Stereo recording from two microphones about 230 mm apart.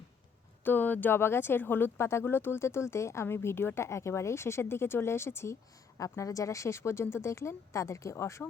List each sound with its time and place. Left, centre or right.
0.6 s speech: centre